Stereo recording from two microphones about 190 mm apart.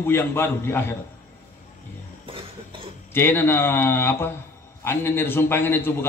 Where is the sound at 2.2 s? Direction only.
30° right (ahead or behind).